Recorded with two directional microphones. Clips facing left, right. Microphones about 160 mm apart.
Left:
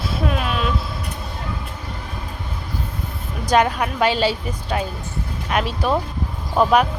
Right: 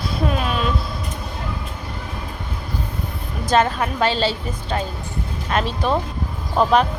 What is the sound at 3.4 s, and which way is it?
A woman's voice, 10° left (ahead or behind).